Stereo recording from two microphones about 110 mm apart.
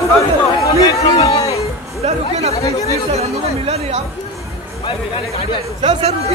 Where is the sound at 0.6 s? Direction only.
30° left (ahead or behind).